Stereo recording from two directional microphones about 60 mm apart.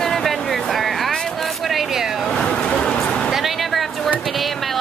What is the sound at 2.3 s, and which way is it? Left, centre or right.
Speech, centre.